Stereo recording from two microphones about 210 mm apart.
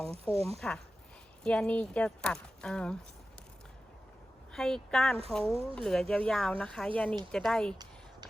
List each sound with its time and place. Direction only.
0.0 s speech: 30° right (ahead or behind)
1.5 s speech: 5° left (ahead or behind)
4.5 s speech: 5° left (ahead or behind)